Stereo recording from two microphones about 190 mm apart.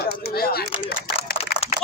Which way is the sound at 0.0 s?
55° left (ahead or behind).